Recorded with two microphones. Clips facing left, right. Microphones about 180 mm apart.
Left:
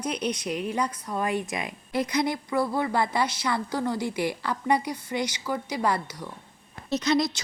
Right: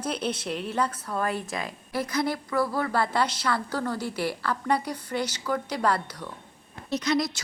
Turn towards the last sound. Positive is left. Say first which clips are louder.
# left 2 dB
turn(degrees=25)  # may be behind; listen again after turning